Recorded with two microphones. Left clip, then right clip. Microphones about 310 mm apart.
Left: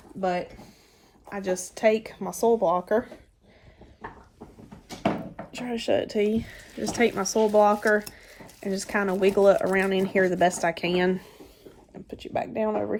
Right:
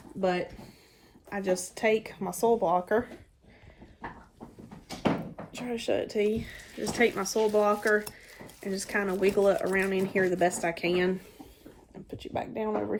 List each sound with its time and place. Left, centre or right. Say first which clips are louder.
0.2 s speech: left 1 dB; centre
5.5 s speech: left 4 dB; left
12.2 s speech: left 5 dB; left